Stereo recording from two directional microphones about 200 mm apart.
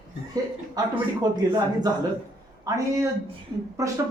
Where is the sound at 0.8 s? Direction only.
20° right (ahead or behind).